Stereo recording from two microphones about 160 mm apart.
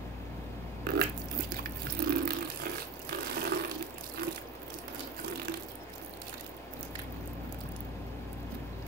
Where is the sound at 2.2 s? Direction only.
70° right (ahead or behind).